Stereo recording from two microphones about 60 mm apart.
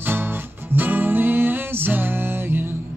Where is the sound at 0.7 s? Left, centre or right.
Right.